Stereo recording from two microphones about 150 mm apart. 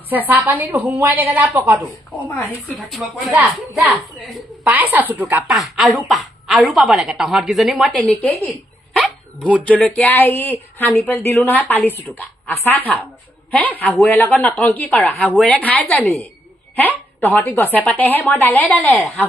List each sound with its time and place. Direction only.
0.1 s a woman's voice: 10° right (ahead or behind)
2.6 s a woman's voice: centre (ahead or behind)
4.6 s a woman's voice: 10° right (ahead or behind)
5.5 s a woman's voice: centre (ahead or behind)
8.0 s a woman's voice: 10° left (ahead or behind)
16.7 s a sound: 10° left (ahead or behind)
17.3 s speech: 10° left (ahead or behind)